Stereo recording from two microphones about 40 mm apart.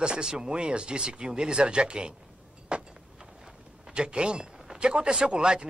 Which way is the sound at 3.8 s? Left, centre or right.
Right.